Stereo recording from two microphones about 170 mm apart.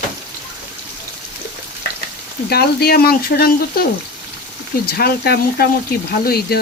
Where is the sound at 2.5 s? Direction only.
70° left (ahead or behind).